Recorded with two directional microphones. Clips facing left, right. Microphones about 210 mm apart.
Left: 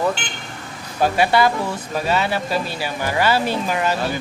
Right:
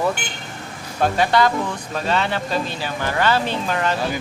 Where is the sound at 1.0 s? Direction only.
10° left (ahead or behind).